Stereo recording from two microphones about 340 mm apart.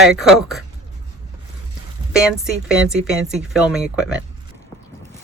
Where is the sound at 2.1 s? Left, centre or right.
Centre.